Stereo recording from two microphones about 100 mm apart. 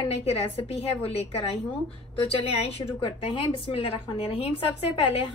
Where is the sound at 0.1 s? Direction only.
85° left.